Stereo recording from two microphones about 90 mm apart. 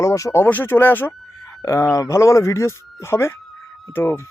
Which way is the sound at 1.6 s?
35° left (ahead or behind).